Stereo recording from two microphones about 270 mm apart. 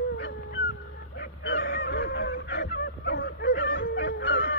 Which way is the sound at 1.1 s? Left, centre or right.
Left.